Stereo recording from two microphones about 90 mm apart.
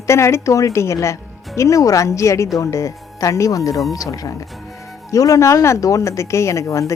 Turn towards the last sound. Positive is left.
turn(degrees=35)  # may be behind; listen again after turning